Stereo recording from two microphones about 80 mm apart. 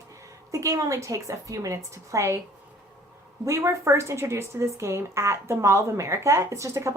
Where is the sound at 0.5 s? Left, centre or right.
Right.